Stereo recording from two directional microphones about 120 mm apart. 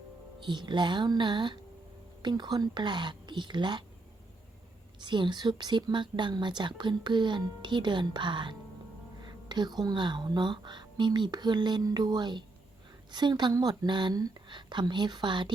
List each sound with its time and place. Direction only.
0.3 s a woman's voice: 40° right (ahead or behind)
4.9 s a woman's voice: 40° right (ahead or behind)